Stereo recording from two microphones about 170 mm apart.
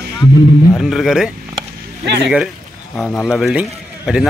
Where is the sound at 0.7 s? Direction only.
Centre (ahead or behind).